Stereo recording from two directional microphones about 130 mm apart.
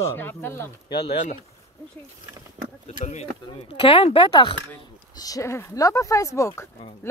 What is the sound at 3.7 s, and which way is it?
Speech, 45° left (ahead or behind).